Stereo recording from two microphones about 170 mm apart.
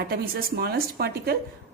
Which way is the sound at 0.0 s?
60° right (ahead or behind).